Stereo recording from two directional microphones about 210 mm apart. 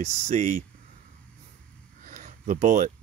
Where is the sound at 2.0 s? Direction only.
35° right (ahead or behind).